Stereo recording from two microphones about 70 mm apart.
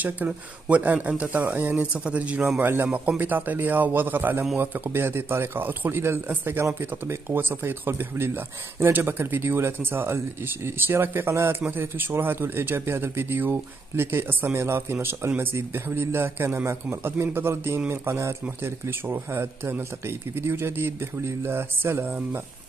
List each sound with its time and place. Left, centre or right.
0.3 s speech: centre